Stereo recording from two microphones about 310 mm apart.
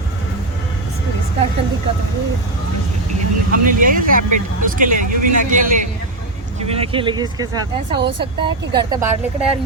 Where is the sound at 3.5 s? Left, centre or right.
Right.